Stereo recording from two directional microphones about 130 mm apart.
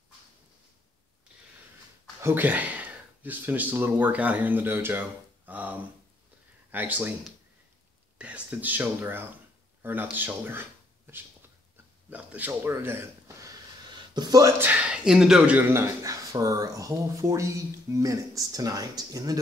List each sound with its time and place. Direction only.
2.2 s speech: 15° right (ahead or behind)
8.2 s speech: 10° right (ahead or behind)
13.8 s a sound: 35° right (ahead or behind)
14.6 s speech: 10° right (ahead or behind)
15.7 s speech: 25° right (ahead or behind)